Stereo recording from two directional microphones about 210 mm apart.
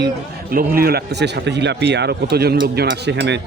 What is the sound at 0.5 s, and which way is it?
Speech, 45° right (ahead or behind).